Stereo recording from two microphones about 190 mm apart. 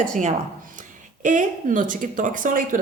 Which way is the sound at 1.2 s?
40° right (ahead or behind).